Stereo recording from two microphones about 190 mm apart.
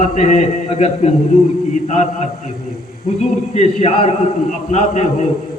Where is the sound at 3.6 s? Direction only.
35° left (ahead or behind).